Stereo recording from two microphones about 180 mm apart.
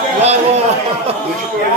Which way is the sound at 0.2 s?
35° right (ahead or behind).